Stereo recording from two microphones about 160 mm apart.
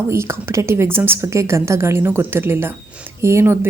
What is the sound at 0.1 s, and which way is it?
A woman's voice, 15° right (ahead or behind).